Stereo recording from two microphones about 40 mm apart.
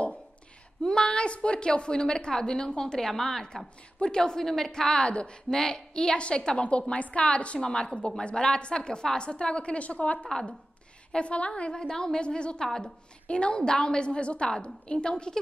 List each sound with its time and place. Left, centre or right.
0.8 s a woman's voice: left
4.0 s a woman's voice: left
11.7 s a woman's voice: centre
13.3 s a woman's voice: left